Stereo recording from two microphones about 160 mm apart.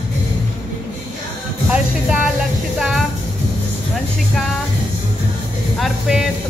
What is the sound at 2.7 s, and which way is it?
Speech, centre (ahead or behind).